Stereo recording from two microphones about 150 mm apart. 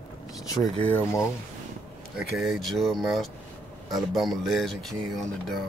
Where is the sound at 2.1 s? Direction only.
Centre (ahead or behind).